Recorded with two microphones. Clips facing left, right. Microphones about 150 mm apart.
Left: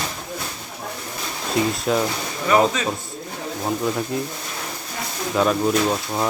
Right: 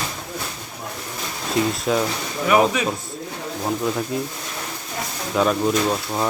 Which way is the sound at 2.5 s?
10° right (ahead or behind).